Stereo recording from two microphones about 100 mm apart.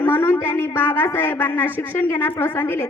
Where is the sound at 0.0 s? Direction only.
20° left (ahead or behind).